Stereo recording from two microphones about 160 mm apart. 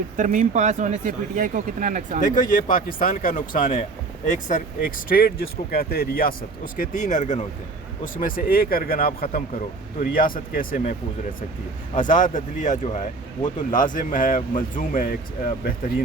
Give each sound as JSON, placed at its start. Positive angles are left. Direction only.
{"t": 0.2, "sound": "speech", "side_deg": -50}
{"t": 2.2, "sound": "speech", "side_deg": 55}
{"t": 6.7, "sound": "speech", "side_deg": 50}
{"t": 11.9, "sound": "speech", "side_deg": 55}